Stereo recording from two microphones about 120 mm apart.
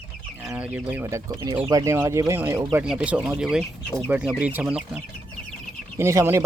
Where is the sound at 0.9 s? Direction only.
20° right (ahead or behind).